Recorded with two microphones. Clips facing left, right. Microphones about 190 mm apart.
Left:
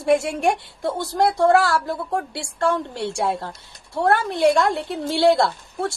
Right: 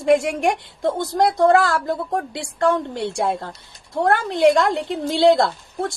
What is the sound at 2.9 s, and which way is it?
A woman's voice, 15° right (ahead or behind).